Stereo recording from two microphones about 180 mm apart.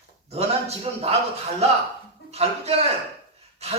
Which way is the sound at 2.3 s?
35° right (ahead or behind).